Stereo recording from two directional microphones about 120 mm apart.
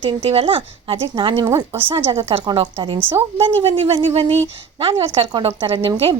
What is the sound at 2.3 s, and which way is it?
A woman's voice, 45° right (ahead or behind).